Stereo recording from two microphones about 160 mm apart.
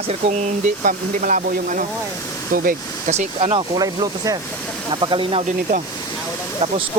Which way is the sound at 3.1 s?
45° right (ahead or behind).